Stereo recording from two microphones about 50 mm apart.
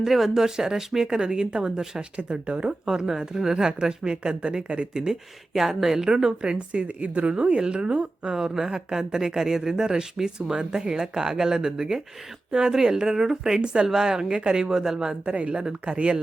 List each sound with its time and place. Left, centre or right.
0.0 s speech: centre; by 2.7 s right
2.8 s speech: centre
5.5 s speech: centre
15.2 s speech: right